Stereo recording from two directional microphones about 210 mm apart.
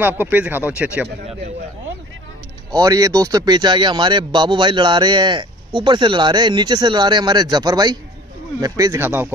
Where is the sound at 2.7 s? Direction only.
15° right (ahead or behind).